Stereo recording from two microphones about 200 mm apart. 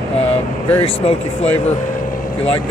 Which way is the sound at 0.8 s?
30° left (ahead or behind).